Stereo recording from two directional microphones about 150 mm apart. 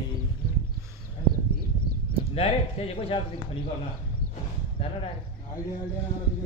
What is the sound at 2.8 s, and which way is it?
Speech, 40° left (ahead or behind).